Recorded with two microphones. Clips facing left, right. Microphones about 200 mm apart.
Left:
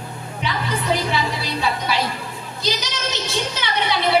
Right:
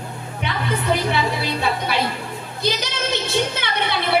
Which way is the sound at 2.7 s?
55° right (ahead or behind).